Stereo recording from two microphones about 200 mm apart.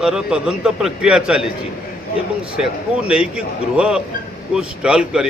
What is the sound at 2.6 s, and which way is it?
A man's voice, 5° right (ahead or behind).